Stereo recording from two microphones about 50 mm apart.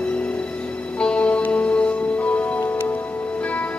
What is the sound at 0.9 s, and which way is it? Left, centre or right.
Music, left.